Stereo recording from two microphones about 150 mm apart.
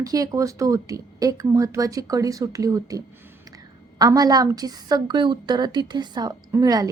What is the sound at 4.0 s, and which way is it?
Speech, 25° right (ahead or behind).